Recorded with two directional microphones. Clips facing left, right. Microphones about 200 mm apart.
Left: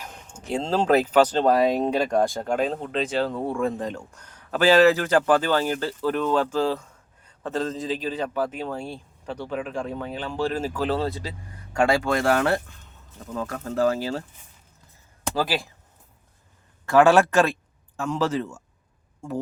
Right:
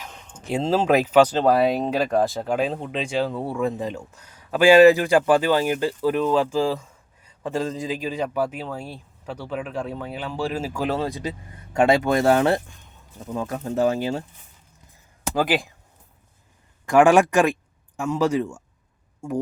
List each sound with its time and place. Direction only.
0.0 s a sound: 10° left (ahead or behind)
0.5 s speech: 5° right (ahead or behind)
15.4 s speech: 20° right (ahead or behind)
16.8 s speech: 15° right (ahead or behind)